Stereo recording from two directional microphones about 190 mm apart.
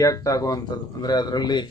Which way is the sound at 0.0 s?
20° left (ahead or behind).